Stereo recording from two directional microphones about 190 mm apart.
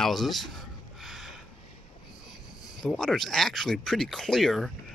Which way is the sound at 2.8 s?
Centre (ahead or behind).